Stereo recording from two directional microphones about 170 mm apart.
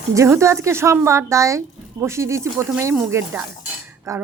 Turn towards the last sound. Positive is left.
turn(degrees=-20)  # may be behind; listen again after turning